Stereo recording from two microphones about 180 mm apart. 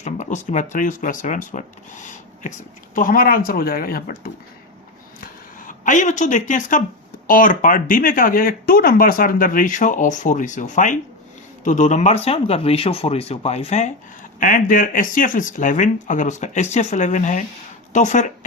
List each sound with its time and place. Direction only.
0.0 s speech: 40° left (ahead or behind)
2.9 s speech: 50° left (ahead or behind)
5.2 s a sound: 50° left (ahead or behind)
7.3 s speech: 50° left (ahead or behind)